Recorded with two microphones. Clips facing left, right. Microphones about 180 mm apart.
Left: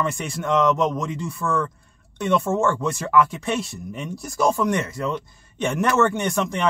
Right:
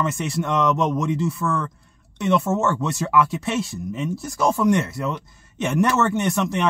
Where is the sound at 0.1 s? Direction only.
Centre (ahead or behind).